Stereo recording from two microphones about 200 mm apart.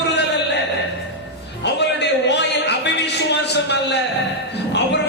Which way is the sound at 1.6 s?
60° left (ahead or behind).